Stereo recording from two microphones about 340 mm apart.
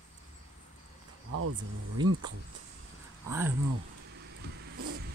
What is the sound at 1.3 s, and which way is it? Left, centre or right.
Speech, right.